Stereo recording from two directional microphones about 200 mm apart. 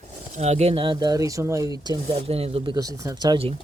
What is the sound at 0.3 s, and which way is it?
Speech, 35° right (ahead or behind).